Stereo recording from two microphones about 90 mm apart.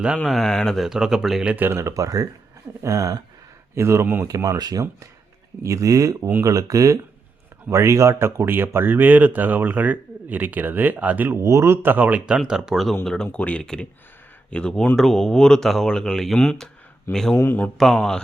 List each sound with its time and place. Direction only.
0.3 s speech: 5° left (ahead or behind)
0.9 s speech: 5° right (ahead or behind)
1.5 s speech: 25° right (ahead or behind)
1.9 s speech: 40° right (ahead or behind)
4.3 s speech: 40° right (ahead or behind); by 13.0 s centre (ahead or behind)
13.2 s speech: 15° left (ahead or behind)
17.3 s a man's voice: 25° left (ahead or behind)
17.7 s speech: 5° left (ahead or behind)